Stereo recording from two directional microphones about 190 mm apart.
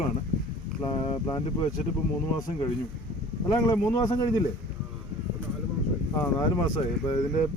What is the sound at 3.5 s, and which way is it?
Speech, 20° left (ahead or behind).